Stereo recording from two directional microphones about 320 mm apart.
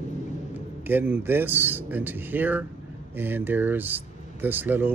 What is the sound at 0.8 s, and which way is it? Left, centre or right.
Speech, centre.